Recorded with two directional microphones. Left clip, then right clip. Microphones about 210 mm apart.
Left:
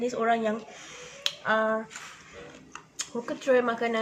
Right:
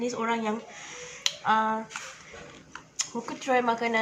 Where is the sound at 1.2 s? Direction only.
10° right (ahead or behind).